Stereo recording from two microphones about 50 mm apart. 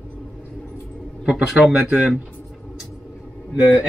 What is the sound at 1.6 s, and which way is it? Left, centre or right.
Speech, centre.